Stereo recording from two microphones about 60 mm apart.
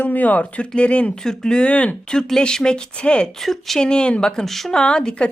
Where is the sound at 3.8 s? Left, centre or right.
Centre.